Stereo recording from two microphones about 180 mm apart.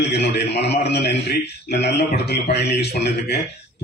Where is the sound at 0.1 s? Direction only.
70° left (ahead or behind).